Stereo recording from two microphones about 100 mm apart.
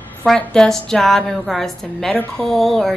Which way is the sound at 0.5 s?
5° left (ahead or behind).